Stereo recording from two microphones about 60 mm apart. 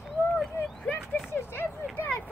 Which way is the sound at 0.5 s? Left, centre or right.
Left.